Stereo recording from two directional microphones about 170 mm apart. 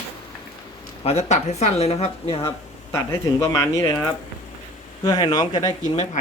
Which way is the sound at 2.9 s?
15° left (ahead or behind).